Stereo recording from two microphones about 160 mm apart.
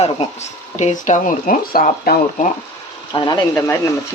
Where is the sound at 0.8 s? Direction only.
50° left (ahead or behind).